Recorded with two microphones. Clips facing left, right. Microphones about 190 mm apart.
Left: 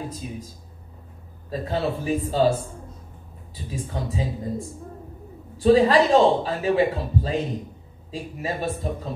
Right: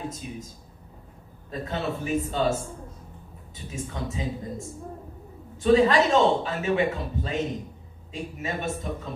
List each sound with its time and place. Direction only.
1.5 s a man's voice: 35° left (ahead or behind)